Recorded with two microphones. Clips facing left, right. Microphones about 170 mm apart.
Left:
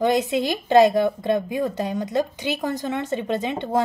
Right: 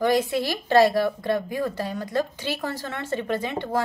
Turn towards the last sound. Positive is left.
turn(degrees=20)  # may be behind; listen again after turning